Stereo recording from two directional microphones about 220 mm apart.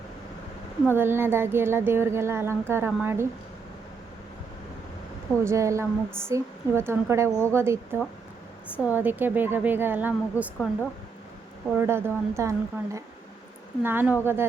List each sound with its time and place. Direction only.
0.9 s speech: 10° right (ahead or behind)
5.4 s speech: 15° right (ahead or behind)
11.7 s speech: 10° right (ahead or behind)